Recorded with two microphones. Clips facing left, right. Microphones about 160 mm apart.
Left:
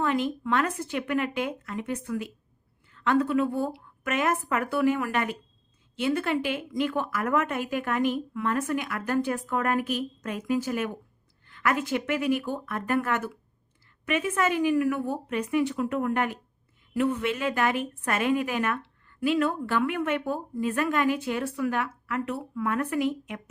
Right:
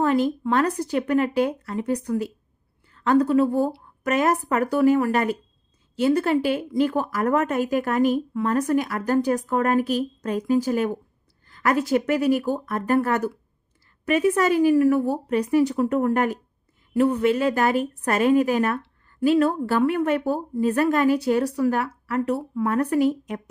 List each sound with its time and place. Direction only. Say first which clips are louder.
0.0 s a woman's voice: right 6 dB; 40° right (ahead or behind)